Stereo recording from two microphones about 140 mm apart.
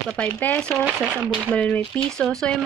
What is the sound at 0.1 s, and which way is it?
Speech, 10° left (ahead or behind).